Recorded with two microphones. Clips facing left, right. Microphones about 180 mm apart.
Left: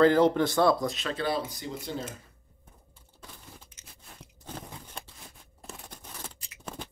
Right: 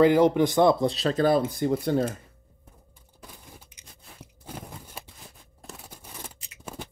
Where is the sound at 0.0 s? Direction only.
15° right (ahead or behind); by 2.1 s 60° right (ahead or behind).